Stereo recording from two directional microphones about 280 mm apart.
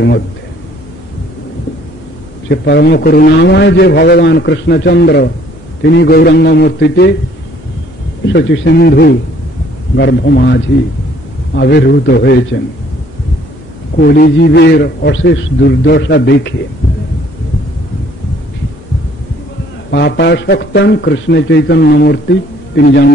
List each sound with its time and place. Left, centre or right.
2.4 s a man's voice: left
8.3 s a man's voice: left
13.9 s a man's voice: left
19.9 s a man's voice: left